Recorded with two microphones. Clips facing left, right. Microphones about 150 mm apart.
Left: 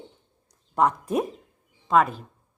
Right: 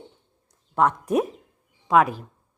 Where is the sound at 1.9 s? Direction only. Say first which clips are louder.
Right 2 dB; 5° right (ahead or behind).